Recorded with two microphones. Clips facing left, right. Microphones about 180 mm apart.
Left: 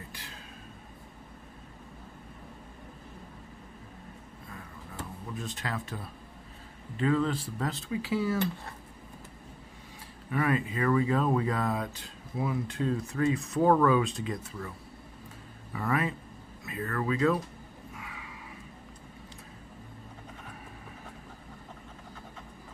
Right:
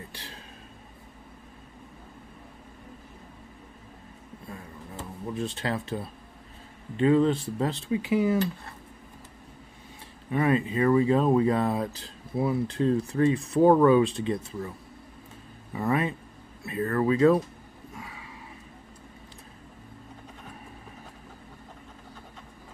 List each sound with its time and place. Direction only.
5.2 s speech: 30° right (ahead or behind)
10.3 s speech: 25° right (ahead or behind)
15.7 s speech: 25° right (ahead or behind)
17.9 s a sound: 30° right (ahead or behind)